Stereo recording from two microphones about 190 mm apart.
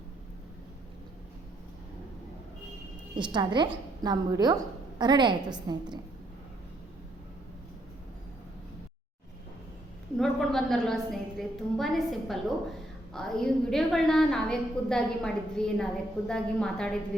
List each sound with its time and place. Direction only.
3.2 s a woman's voice: 25° right (ahead or behind)
10.2 s a woman's voice: centre (ahead or behind)